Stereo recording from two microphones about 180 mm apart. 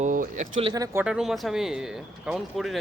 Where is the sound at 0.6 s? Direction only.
20° right (ahead or behind).